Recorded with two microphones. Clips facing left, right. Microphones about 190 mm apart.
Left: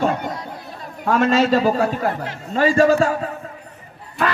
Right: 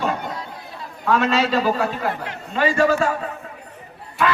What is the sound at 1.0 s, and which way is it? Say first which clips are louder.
A man's voice: left 3 dB; 45° left (ahead or behind).